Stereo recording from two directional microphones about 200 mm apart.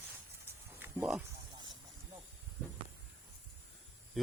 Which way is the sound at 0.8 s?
5° right (ahead or behind).